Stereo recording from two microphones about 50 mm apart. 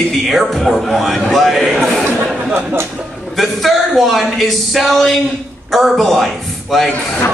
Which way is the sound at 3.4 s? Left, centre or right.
Centre.